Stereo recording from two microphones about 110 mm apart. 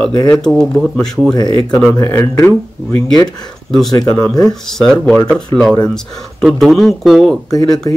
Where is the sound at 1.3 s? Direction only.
35° left (ahead or behind).